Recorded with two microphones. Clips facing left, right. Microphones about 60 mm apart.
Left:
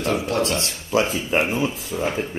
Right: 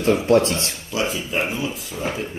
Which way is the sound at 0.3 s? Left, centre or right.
Right.